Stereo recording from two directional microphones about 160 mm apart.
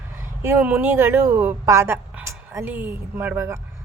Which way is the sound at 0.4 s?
10° right (ahead or behind).